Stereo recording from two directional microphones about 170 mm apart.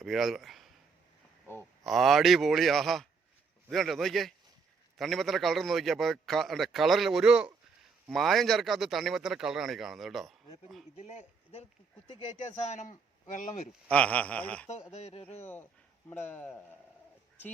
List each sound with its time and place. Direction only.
0.0 s a man's voice: centre (ahead or behind)
1.8 s a man's voice: centre (ahead or behind)
10.9 s a man's voice: 40° left (ahead or behind)
13.8 s a sound: 5° left (ahead or behind)
14.9 s a man's voice: 40° left (ahead or behind)
16.0 s a sound: 15° left (ahead or behind)